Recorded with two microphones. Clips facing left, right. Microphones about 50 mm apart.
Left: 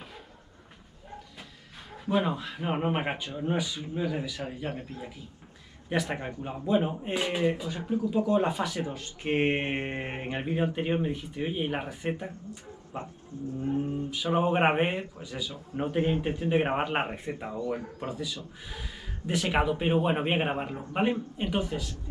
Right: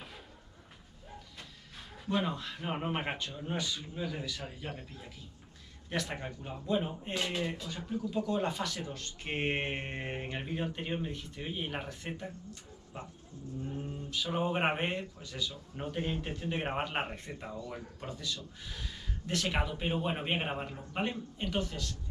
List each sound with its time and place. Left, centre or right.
2.0 s speech: centre